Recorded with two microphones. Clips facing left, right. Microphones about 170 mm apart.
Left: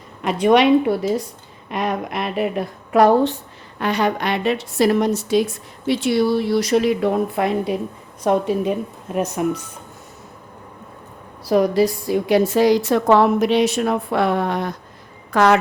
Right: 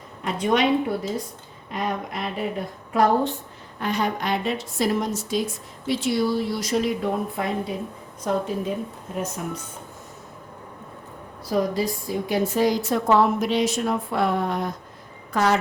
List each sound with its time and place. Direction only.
0.2 s a woman's voice: 75° left (ahead or behind)
11.4 s a woman's voice: 75° left (ahead or behind)
15.3 s a woman's voice: 90° left